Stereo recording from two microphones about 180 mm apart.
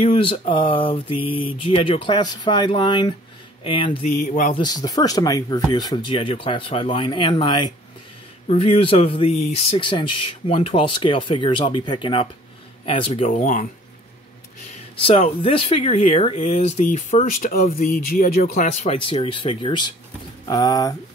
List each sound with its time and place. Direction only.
0.0 s mantra: 30° left (ahead or behind)
4.1 s speech: 45° left (ahead or behind)
4.6 s mantra: 20° left (ahead or behind)
8.5 s speech: 30° left (ahead or behind)
9.4 s mantra: 35° left (ahead or behind)
13.3 s speech: 45° left (ahead or behind)
15.4 s speech: 30° left (ahead or behind); by 18.7 s 55° left (ahead or behind)
18.7 s mantra: 35° left (ahead or behind); by 20.9 s 20° left (ahead or behind)